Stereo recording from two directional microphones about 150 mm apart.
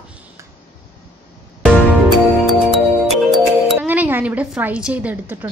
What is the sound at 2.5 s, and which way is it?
Music, centre (ahead or behind).